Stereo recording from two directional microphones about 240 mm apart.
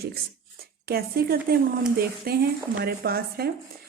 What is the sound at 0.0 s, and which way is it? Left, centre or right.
Speech, right.